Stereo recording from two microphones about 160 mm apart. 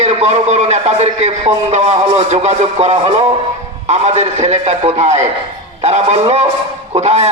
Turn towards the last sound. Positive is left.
turn(degrees=-45)  # may be behind; listen again after turning